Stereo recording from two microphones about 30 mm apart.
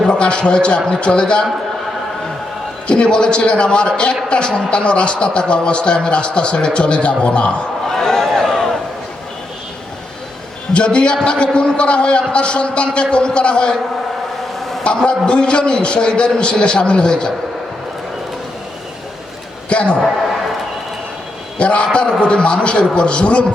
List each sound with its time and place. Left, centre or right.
0.0 s a man's voice: left
2.8 s speech: left
7.9 s a sound: centre
10.8 s speech: left
14.8 s speech: left
19.7 s speech: left
21.6 s speech: left